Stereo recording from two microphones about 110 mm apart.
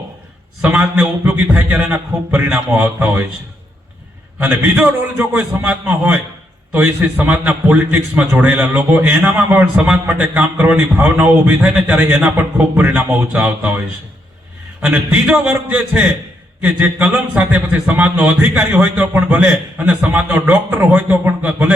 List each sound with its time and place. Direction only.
0.6 s a man's voice: 15° right (ahead or behind)
4.4 s a man's voice: 15° right (ahead or behind)
14.8 s a man's voice: 10° right (ahead or behind)